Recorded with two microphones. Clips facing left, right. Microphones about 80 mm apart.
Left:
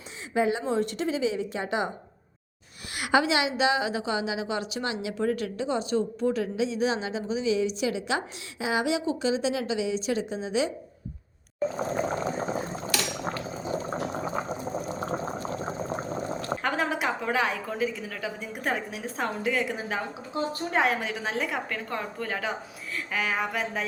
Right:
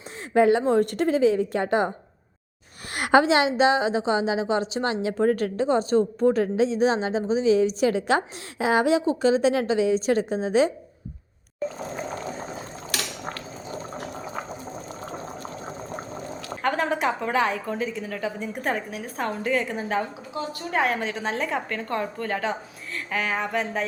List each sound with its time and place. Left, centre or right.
0.3 s a woman's voice: right
2.9 s a woman's voice: right
16.6 s a woman's voice: centre
18.9 s a woman's voice: centre